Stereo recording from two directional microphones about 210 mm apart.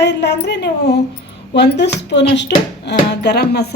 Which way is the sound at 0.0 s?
55° left (ahead or behind).